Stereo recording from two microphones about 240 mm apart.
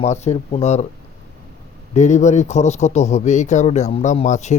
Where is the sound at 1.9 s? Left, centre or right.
Left.